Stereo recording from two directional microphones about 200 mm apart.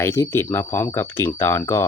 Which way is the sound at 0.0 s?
15° left (ahead or behind).